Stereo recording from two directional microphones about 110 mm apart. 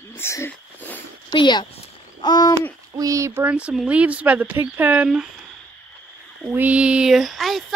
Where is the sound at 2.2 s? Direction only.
35° left (ahead or behind).